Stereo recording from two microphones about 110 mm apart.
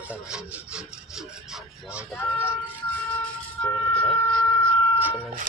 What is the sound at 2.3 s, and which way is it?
Vehicle, 20° left (ahead or behind).